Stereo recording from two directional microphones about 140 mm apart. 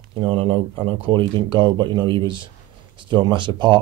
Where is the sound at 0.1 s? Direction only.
40° right (ahead or behind).